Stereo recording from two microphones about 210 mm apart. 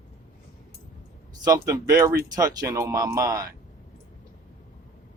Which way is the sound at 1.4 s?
15° right (ahead or behind).